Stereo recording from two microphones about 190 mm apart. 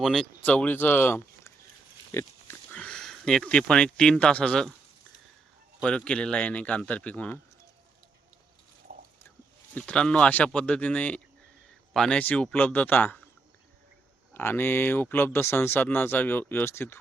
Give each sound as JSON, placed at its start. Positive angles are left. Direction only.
{"t": 0.0, "sound": "speech", "side_deg": 0}
{"t": 5.8, "sound": "speech", "side_deg": 5}
{"t": 8.9, "sound": "a sound", "side_deg": -50}
{"t": 9.7, "sound": "speech", "side_deg": 5}
{"t": 14.3, "sound": "speech", "side_deg": 10}